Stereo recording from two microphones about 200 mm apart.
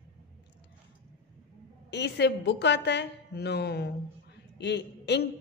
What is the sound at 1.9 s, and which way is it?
A woman's voice, 60° left (ahead or behind).